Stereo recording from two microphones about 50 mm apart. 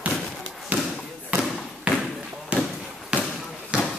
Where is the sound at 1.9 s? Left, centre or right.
Right.